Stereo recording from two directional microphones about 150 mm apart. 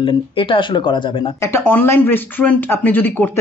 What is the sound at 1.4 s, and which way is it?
Speech, 15° left (ahead or behind).